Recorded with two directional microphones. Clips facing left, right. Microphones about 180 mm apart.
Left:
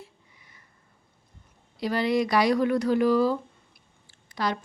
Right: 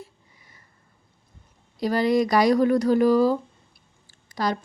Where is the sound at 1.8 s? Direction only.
40° right (ahead or behind).